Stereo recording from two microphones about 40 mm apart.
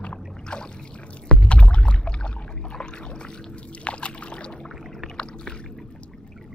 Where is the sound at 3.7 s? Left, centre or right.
Left.